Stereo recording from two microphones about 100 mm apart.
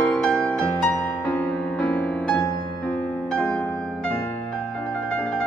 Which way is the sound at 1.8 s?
15° left (ahead or behind).